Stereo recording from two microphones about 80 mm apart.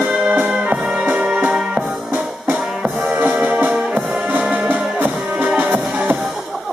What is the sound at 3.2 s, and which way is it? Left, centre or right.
Music, centre.